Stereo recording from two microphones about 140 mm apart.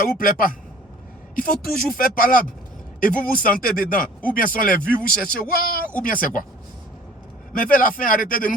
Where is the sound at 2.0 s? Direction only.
90° left.